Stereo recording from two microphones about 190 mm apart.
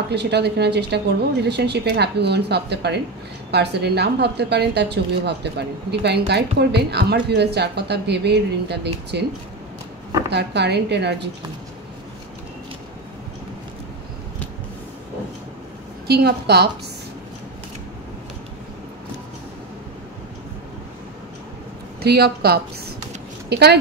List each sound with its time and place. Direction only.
0.1 s a woman's voice: 60° right (ahead or behind)
10.3 s a woman's voice: 65° right (ahead or behind)
16.1 s a woman's voice: 60° right (ahead or behind)
22.0 s a woman's voice: 55° right (ahead or behind)